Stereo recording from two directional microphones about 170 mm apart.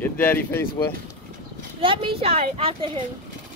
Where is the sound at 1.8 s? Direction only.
30° right (ahead or behind).